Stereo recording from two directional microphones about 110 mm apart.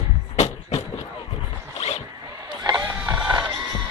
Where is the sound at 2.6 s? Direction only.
35° right (ahead or behind).